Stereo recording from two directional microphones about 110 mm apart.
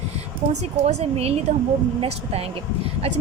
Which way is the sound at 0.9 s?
75° right (ahead or behind).